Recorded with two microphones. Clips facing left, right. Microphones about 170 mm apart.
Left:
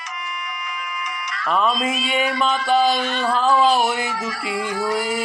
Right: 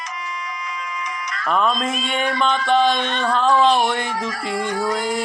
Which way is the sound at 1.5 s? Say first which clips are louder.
Even; 5° left (ahead or behind).